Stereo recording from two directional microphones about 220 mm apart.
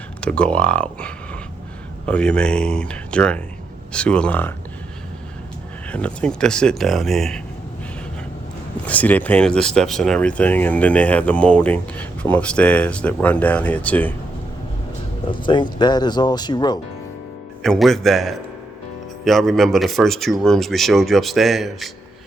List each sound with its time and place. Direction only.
0.2 s speech: 5° left (ahead or behind)
5.9 s speech: 5° left (ahead or behind)
8.9 s speech: 5° left (ahead or behind)
15.3 s speech: 20° left (ahead or behind)
17.6 s speech: centre (ahead or behind)